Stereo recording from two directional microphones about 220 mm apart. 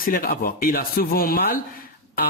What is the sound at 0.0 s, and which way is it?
Speech, 40° left (ahead or behind).